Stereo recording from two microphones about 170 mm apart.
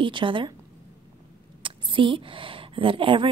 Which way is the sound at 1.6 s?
30° right (ahead or behind).